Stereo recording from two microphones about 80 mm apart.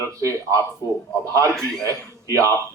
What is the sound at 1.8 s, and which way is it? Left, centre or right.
Speech, right.